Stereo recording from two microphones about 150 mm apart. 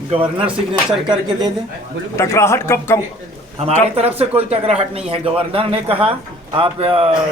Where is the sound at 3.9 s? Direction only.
40° right (ahead or behind).